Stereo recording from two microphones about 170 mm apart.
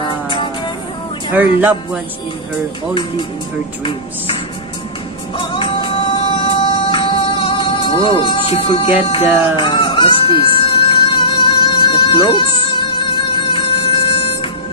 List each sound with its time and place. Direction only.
0.0 s music: 30° left (ahead or behind)
1.3 s speech: 10° right (ahead or behind)
2.9 s speech: 30° left (ahead or behind)
5.4 s music: 30° left (ahead or behind)